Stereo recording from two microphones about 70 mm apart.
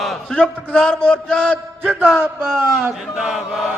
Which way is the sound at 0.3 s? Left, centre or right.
Centre.